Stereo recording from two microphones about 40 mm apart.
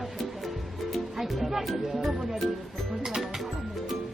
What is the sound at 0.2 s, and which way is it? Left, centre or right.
Music, centre.